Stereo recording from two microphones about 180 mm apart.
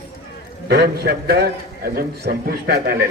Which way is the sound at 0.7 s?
65° right (ahead or behind).